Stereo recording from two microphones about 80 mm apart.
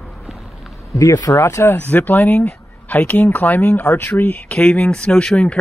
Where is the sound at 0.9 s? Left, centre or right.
Left.